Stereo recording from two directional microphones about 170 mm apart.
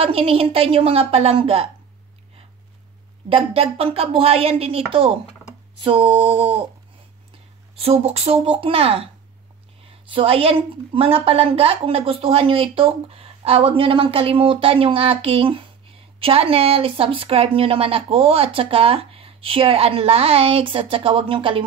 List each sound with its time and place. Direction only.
0.0 s a woman's voice: 35° right (ahead or behind)
3.3 s a woman's voice: 35° right (ahead or behind)
5.8 s a sound: 30° right (ahead or behind)
7.8 s a woman's voice: 35° right (ahead or behind)